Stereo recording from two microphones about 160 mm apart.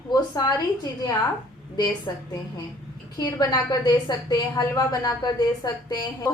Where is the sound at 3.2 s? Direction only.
25° left (ahead or behind).